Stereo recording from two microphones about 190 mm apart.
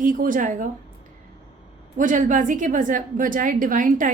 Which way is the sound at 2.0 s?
45° right (ahead or behind).